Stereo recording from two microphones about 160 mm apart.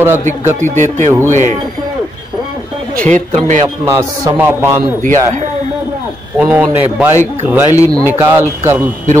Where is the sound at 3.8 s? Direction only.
20° right (ahead or behind).